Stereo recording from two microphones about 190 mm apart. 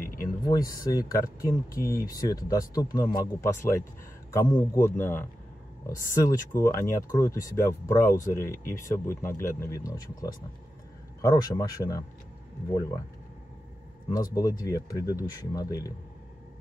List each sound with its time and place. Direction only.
0.0 s a sound: 50° left (ahead or behind)
0.5 s speech: 20° left (ahead or behind)
14.0 s speech: 20° left (ahead or behind)